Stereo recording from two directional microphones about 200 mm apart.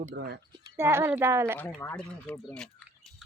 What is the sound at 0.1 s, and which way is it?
Speech, 55° right (ahead or behind).